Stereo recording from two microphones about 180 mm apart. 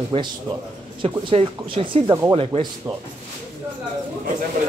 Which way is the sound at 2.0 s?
15° right (ahead or behind).